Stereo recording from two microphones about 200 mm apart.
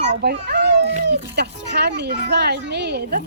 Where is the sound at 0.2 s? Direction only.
55° right (ahead or behind).